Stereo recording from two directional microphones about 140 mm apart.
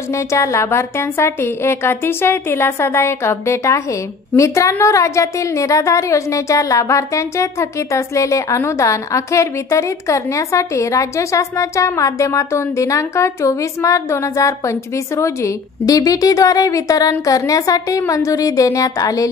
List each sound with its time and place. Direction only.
0.3 s a woman's voice: 20° left (ahead or behind)